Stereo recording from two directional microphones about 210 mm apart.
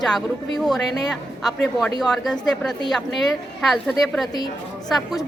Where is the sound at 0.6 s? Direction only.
Centre (ahead or behind).